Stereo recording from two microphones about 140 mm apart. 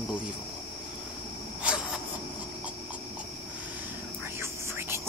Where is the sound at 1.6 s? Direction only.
5° right (ahead or behind).